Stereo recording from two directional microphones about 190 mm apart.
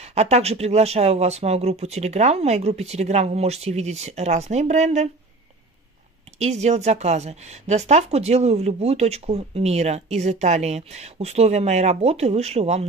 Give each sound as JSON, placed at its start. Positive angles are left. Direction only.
{"t": 0.1, "sound": "speech", "side_deg": -35}
{"t": 6.4, "sound": "speech", "side_deg": -35}